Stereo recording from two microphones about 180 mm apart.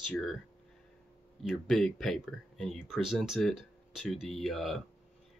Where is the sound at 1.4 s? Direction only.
Centre (ahead or behind).